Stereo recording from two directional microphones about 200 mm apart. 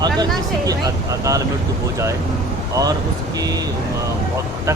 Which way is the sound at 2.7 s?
20° right (ahead or behind).